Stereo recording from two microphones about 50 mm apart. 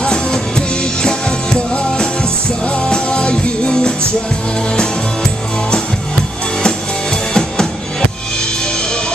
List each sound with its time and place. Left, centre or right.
0.0 s music: centre
2.6 s music: left